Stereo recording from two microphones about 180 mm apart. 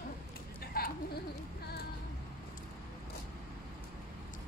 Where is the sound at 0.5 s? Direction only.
60° left (ahead or behind).